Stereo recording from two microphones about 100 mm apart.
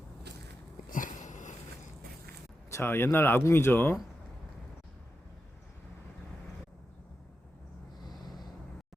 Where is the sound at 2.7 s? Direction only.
25° left (ahead or behind).